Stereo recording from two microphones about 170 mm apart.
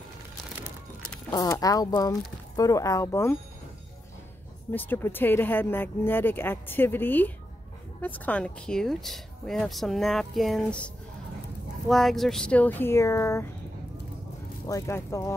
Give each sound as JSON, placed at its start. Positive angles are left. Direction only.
{"t": 1.3, "sound": "speech", "side_deg": 20}
{"t": 4.7, "sound": "a woman's voice", "side_deg": 10}
{"t": 11.9, "sound": "speech", "side_deg": 0}
{"t": 14.7, "sound": "speech", "side_deg": 15}